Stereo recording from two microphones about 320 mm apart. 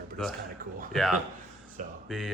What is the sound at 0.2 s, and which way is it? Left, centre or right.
Speech, centre.